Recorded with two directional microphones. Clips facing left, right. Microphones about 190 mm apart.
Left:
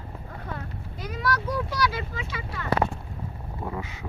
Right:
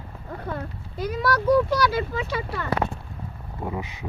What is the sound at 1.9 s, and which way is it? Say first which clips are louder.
Speech: right 8 dB; 40° right (ahead or behind).